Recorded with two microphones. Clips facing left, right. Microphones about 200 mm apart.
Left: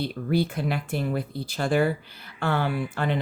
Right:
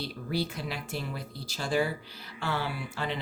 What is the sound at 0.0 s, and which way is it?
Speech, 55° left (ahead or behind).